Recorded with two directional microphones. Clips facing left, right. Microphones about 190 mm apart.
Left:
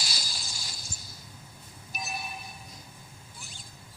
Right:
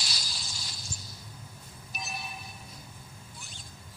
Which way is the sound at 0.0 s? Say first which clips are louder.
Left 2 dB; centre (ahead or behind).